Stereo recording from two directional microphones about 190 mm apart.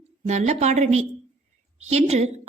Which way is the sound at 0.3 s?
35° right (ahead or behind).